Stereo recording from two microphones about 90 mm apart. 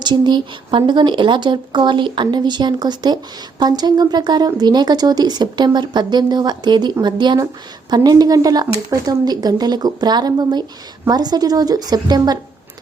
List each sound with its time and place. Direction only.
0.0 s speech: 55° right (ahead or behind)